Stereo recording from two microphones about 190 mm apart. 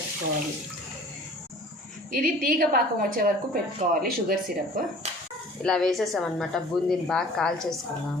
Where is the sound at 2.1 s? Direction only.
50° right (ahead or behind).